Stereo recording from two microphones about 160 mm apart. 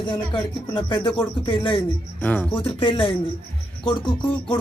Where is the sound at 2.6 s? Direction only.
35° left (ahead or behind).